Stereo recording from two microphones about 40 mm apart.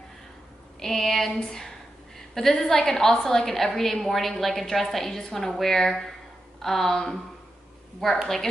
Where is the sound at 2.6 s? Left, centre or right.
Centre.